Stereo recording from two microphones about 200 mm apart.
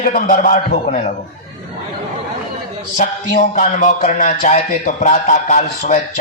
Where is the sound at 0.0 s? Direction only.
40° left (ahead or behind).